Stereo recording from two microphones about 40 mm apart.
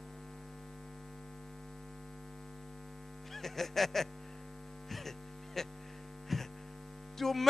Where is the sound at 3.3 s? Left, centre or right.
Centre.